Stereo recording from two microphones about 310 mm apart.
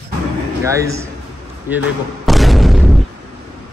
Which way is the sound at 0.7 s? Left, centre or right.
Centre.